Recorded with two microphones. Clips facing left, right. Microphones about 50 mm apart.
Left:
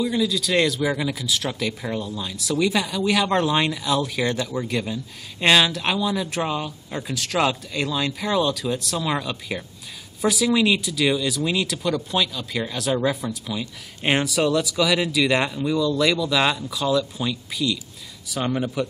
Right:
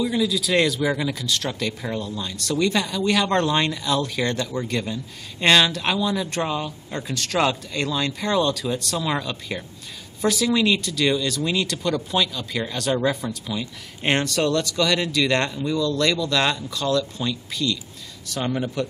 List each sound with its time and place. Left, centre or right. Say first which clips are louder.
0.0 s speech: even; centre